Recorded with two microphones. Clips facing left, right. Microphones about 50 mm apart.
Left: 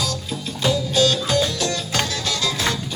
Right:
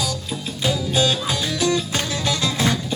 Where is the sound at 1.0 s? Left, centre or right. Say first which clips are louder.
Left 3 dB; centre.